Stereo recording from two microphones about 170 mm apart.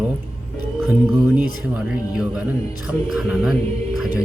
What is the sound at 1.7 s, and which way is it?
Speech, 5° right (ahead or behind).